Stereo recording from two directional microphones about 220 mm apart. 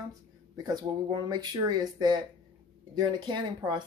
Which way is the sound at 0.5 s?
15° right (ahead or behind).